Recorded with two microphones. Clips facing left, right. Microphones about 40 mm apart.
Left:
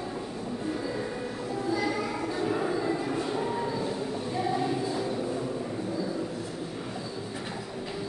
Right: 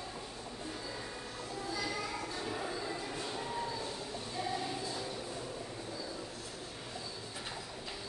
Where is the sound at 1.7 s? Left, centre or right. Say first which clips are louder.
Left 9 dB; left.